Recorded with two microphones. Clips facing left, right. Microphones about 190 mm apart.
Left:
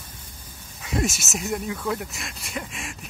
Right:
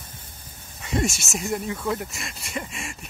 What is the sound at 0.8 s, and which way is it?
Speech, centre (ahead or behind).